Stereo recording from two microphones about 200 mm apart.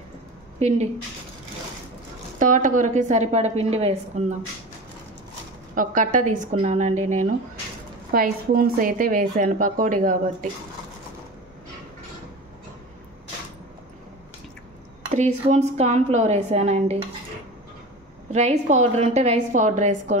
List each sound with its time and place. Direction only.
0.6 s speech: 35° right (ahead or behind)
2.3 s a woman's voice: 40° right (ahead or behind)
5.8 s a woman's voice: 40° right (ahead or behind)
8.1 s a woman's voice: 45° right (ahead or behind)
15.1 s a woman's voice: 35° right (ahead or behind)
18.3 s a woman's voice: 35° right (ahead or behind)